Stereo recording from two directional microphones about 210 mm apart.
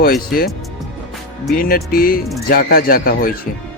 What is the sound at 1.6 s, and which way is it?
Speech, 45° left (ahead or behind).